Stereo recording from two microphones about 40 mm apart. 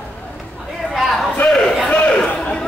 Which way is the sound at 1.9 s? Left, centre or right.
Left.